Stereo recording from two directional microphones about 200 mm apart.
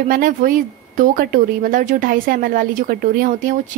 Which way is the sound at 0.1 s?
45° right (ahead or behind).